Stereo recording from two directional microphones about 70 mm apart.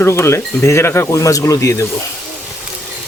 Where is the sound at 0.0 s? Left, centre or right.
Left.